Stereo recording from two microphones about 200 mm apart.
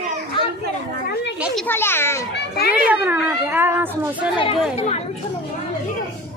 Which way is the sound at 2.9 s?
10° right (ahead or behind).